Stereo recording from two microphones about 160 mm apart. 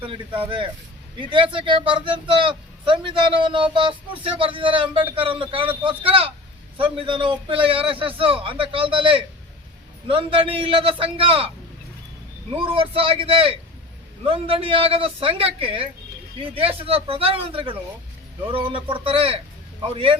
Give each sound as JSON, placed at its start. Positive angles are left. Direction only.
{"t": 1.2, "sound": "speech", "side_deg": -30}
{"t": 12.5, "sound": "speech", "side_deg": -35}